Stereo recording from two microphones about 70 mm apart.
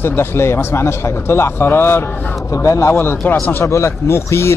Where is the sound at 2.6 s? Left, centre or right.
Left.